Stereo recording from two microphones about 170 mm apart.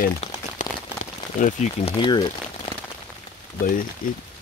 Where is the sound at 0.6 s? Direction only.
45° left (ahead or behind).